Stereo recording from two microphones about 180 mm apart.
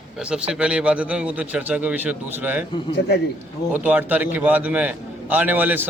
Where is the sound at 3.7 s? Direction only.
10° right (ahead or behind).